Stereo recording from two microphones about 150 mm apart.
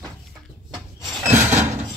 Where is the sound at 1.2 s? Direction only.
15° right (ahead or behind).